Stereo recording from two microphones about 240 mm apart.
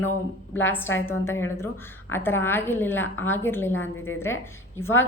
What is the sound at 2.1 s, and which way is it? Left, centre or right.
Speech, centre.